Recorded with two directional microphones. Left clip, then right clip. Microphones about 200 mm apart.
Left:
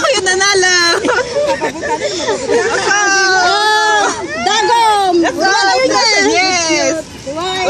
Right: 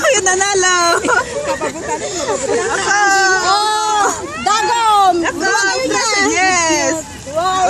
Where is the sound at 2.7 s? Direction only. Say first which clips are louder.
Left 1 dB; 20° left (ahead or behind).